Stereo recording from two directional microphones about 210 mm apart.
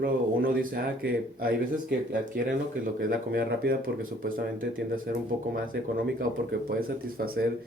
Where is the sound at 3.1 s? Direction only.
45° right (ahead or behind).